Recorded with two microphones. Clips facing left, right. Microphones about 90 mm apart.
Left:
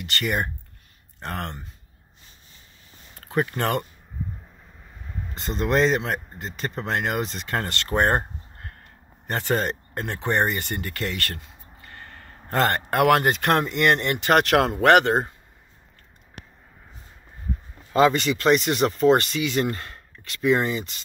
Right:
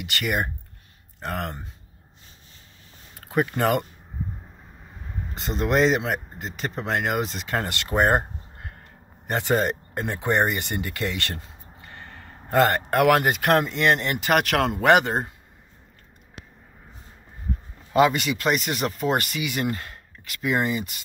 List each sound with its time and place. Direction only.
0.0 s speech: 5° right (ahead or behind)
3.2 s speech: 10° right (ahead or behind)
5.3 s speech: 5° right (ahead or behind); by 12.2 s 20° right (ahead or behind)
12.4 s speech: 5° right (ahead or behind)
14.9 s speech: 15° right (ahead or behind)
17.9 s speech: 10° right (ahead or behind)